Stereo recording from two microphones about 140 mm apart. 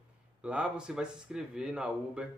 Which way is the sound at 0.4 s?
5° right (ahead or behind).